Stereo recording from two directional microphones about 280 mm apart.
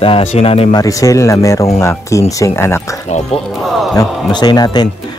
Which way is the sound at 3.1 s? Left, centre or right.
Left.